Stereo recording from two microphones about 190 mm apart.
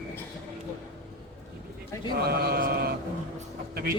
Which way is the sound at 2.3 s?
55° right (ahead or behind).